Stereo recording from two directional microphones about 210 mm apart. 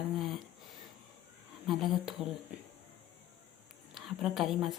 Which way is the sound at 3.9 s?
Centre (ahead or behind).